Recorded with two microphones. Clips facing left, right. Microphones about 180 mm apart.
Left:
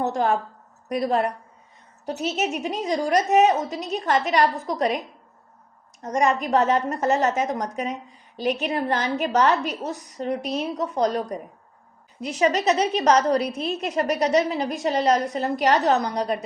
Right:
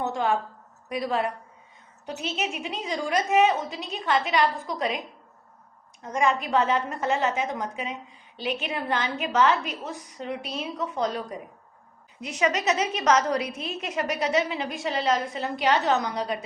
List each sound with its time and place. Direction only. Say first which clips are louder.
0.0 s a woman's voice: left 3 dB; 40° left (ahead or behind)
6.0 s a woman's voice: left 3 dB; 40° left (ahead or behind)